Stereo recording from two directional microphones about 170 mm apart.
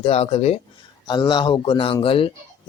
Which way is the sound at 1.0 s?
25° left (ahead or behind).